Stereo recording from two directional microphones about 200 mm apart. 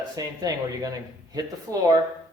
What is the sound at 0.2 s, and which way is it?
Speech, 15° right (ahead or behind).